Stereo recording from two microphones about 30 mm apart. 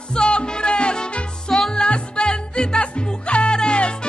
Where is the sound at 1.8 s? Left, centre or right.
Left.